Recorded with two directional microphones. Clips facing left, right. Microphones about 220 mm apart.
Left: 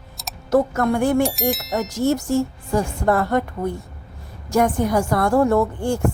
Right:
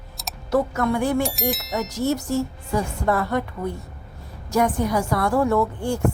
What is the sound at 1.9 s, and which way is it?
A woman's voice, 50° left (ahead or behind).